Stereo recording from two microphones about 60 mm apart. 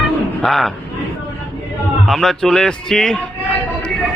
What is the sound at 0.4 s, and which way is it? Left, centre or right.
Speech, centre.